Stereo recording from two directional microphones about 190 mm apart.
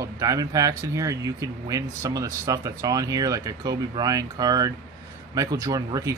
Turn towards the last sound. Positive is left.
turn(degrees=-20)  # may be behind; listen again after turning